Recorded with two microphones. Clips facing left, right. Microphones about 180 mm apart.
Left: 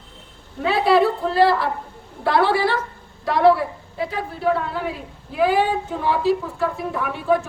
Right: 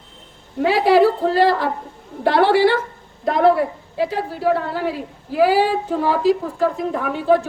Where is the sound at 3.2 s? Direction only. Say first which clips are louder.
Even; 50° right (ahead or behind).